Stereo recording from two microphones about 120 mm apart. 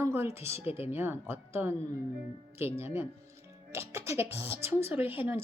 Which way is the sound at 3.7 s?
20° right (ahead or behind).